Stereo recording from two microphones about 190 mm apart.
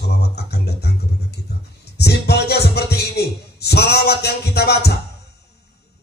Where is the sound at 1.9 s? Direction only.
60° left (ahead or behind).